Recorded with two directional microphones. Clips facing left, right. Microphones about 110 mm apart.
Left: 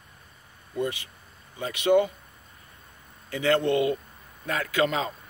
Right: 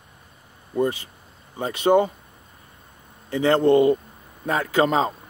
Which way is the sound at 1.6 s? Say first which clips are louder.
Right 3 dB; 40° right (ahead or behind).